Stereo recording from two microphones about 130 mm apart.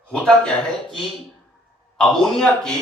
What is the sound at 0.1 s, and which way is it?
Speech, 5° left (ahead or behind).